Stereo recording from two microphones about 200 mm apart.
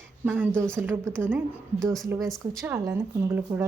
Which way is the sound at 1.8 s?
Centre (ahead or behind).